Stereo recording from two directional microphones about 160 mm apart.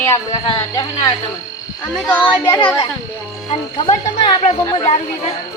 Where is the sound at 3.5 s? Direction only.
45° left (ahead or behind).